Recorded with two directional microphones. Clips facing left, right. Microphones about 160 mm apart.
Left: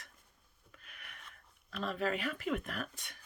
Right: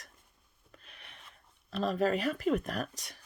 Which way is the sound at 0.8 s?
25° right (ahead or behind).